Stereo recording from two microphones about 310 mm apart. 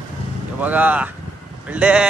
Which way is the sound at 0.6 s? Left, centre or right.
Centre.